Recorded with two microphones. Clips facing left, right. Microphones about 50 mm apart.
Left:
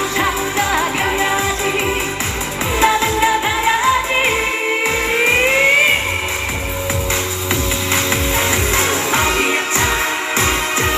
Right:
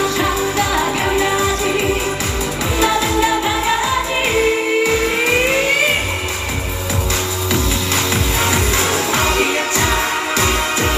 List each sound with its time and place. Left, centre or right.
0.2 s music: left
2.8 s music of asia: left
4.9 s music: left
8.1 s music: left